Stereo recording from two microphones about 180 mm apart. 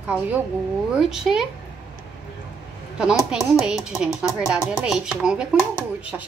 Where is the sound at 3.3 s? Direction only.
5° right (ahead or behind).